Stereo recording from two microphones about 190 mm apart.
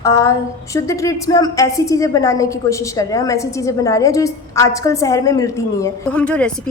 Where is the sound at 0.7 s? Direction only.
15° left (ahead or behind).